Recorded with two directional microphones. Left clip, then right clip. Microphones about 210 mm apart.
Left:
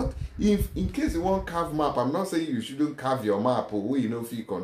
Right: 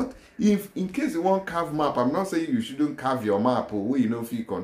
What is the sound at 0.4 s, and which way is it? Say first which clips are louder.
Speech: right 1 dB; 10° right (ahead or behind).